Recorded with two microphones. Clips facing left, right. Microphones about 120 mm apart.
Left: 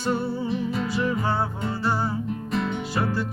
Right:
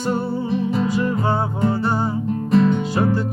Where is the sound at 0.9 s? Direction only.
20° right (ahead or behind).